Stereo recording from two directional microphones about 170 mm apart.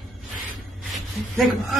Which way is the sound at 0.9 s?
Centre (ahead or behind).